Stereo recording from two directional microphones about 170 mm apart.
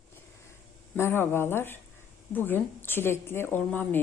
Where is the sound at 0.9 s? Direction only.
15° left (ahead or behind).